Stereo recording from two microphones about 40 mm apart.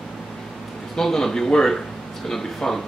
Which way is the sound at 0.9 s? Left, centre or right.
Centre.